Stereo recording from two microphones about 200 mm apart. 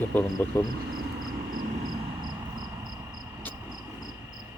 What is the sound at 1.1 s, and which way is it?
Vehicle, 45° right (ahead or behind).